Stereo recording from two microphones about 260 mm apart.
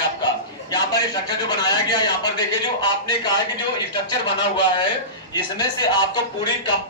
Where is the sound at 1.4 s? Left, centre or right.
Centre.